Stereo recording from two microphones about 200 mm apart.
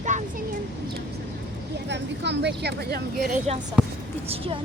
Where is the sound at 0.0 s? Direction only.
35° right (ahead or behind).